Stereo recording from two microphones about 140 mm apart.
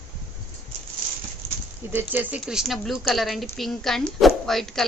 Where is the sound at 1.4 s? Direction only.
45° right (ahead or behind).